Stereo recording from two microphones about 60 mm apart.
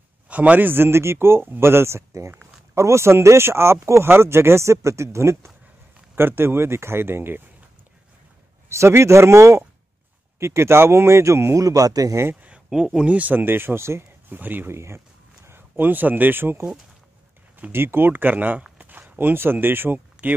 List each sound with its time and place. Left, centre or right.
0.3 s speech: right
8.6 s speech: right
11.5 s a man's voice: right
12.4 s a sound: right
12.6 s speech: centre
13.1 s speech: right
14.3 s speech: right
14.7 s speech: right